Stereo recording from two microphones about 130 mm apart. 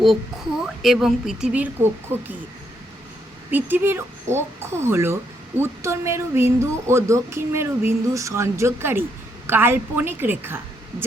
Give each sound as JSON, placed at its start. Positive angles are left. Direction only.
{"t": 0.6, "sound": "speech", "side_deg": -5}
{"t": 3.5, "sound": "a woman's voice", "side_deg": -15}